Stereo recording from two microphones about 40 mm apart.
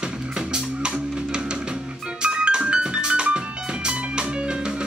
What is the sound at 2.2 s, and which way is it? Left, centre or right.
Music, right.